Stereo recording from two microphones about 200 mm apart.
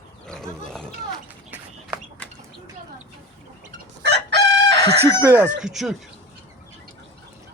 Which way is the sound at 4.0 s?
60° right (ahead or behind).